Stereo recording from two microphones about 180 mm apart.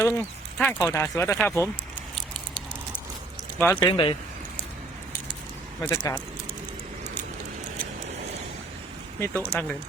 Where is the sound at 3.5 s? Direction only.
10° left (ahead or behind).